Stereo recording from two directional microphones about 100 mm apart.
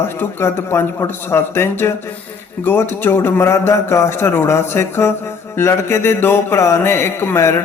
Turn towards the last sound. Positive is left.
turn(degrees=25)  # may be behind; listen again after turning